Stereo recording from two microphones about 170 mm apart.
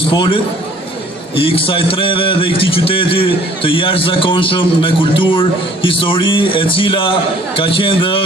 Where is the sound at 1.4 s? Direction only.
30° left (ahead or behind).